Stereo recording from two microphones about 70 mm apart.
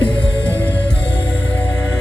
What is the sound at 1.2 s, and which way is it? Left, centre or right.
Music, left.